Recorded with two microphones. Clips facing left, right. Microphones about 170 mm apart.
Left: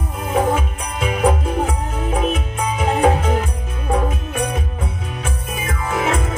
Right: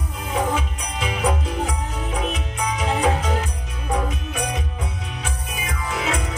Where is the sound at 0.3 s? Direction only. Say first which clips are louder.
Left 5 dB; 50° left (ahead or behind).